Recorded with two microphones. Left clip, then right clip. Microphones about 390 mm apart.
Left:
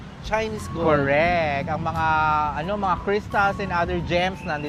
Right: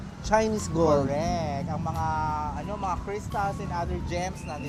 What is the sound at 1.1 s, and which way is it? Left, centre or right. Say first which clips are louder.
Speech: left 9 dB; left.